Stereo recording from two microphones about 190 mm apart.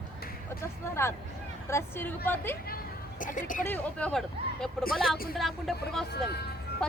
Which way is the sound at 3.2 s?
45° left (ahead or behind).